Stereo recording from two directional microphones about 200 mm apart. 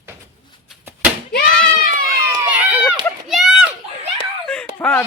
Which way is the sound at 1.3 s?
50° left (ahead or behind).